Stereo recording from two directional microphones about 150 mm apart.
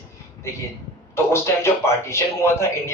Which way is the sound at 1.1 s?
15° left (ahead or behind).